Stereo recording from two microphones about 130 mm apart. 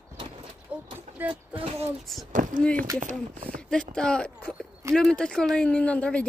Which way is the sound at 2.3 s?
90° right.